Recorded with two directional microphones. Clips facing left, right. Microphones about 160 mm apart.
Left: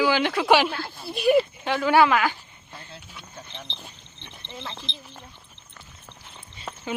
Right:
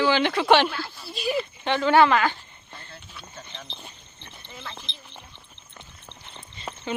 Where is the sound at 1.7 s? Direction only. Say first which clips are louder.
Right 3 dB; 5° left (ahead or behind).